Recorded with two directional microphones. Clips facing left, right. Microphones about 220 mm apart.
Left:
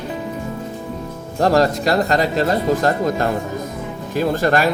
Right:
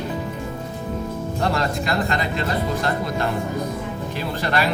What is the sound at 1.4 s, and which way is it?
Speech, 40° left (ahead or behind).